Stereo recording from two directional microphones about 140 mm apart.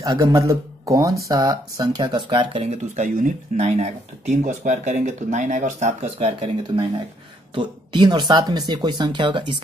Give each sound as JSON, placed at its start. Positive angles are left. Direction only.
{"t": 0.0, "sound": "a man's voice", "side_deg": -25}
{"t": 2.6, "sound": "speech", "side_deg": -60}
{"t": 6.1, "sound": "speech", "side_deg": -40}